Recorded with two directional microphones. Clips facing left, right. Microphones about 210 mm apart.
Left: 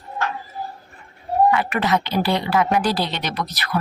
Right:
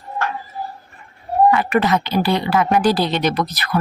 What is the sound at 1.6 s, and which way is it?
Speech, 45° right (ahead or behind).